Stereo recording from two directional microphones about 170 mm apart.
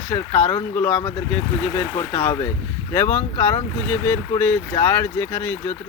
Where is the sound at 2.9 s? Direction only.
15° left (ahead or behind).